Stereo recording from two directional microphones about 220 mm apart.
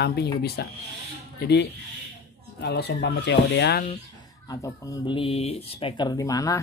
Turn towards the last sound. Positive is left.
turn(degrees=15)  # may be behind; listen again after turning